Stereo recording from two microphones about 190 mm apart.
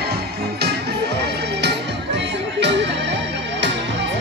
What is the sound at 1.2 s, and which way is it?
Music, 60° right (ahead or behind).